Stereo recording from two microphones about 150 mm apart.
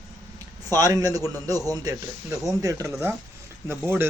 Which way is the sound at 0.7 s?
25° right (ahead or behind).